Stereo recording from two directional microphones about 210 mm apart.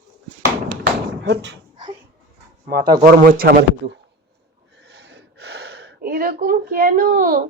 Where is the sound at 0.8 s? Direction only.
55° right (ahead or behind).